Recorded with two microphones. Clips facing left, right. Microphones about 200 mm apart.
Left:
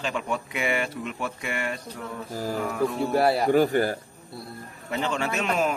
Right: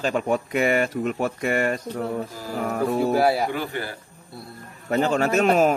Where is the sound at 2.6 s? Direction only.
45° right (ahead or behind).